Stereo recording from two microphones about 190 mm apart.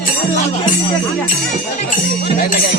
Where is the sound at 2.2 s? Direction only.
55° left (ahead or behind).